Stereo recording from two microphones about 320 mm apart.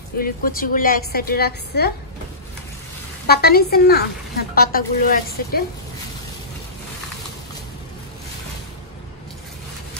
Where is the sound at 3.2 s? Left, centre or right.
Left.